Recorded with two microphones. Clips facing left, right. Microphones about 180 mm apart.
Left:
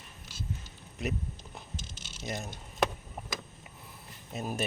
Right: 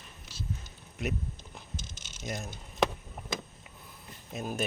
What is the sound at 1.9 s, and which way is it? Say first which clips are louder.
Typing: left 2 dB; 45° right (ahead or behind).